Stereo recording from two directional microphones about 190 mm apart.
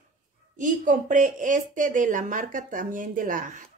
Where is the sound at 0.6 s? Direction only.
40° right (ahead or behind).